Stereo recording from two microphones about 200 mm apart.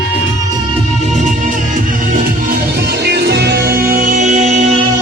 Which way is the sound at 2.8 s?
55° right (ahead or behind).